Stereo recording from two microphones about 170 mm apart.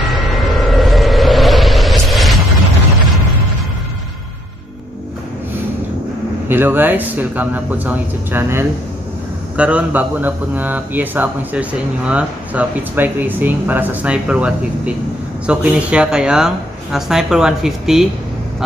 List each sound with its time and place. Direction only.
0.1 s vehicle: centre (ahead or behind)
6.5 s speech: 10° right (ahead or behind)